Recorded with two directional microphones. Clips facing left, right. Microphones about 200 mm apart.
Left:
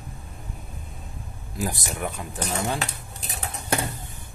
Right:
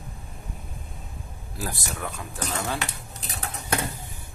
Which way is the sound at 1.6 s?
20° left (ahead or behind).